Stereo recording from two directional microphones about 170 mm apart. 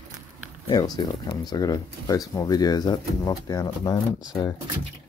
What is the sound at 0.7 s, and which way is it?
Speech, 25° left (ahead or behind).